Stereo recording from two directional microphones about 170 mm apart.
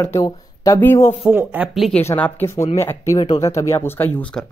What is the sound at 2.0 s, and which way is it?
Speech, 10° left (ahead or behind).